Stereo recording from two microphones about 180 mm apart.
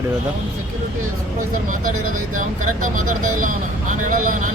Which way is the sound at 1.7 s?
50° right (ahead or behind).